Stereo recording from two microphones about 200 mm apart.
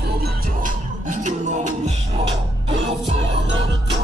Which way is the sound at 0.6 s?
40° right (ahead or behind).